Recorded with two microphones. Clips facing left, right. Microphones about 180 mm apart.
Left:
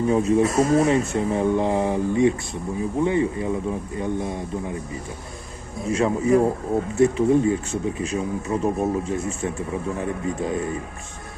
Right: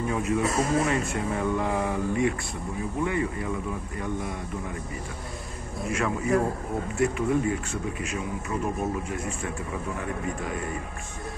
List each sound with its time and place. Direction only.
0.1 s speech: 30° left (ahead or behind)
5.9 s speech: 25° left (ahead or behind)